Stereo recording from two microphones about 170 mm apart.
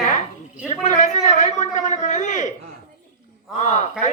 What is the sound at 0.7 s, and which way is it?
A man's voice, 45° left (ahead or behind).